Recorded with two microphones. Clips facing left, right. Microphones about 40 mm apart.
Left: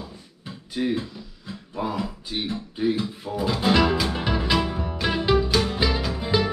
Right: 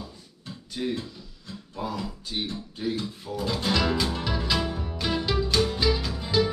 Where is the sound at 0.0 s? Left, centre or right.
Centre.